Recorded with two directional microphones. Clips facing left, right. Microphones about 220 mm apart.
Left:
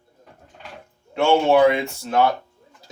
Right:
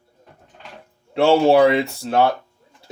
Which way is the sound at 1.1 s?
35° right (ahead or behind).